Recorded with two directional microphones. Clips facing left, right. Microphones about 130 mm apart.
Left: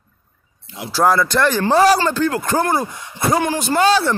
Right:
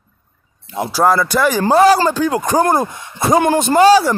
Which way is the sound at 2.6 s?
45° right (ahead or behind).